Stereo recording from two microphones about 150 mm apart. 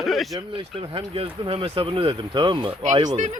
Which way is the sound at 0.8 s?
35° right (ahead or behind).